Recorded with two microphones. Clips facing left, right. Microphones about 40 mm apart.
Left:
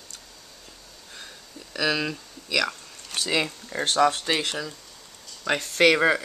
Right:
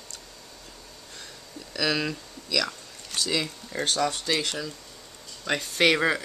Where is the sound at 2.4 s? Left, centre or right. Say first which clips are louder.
Left 3 dB; left.